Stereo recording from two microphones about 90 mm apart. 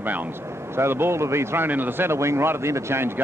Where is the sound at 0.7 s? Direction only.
25° right (ahead or behind).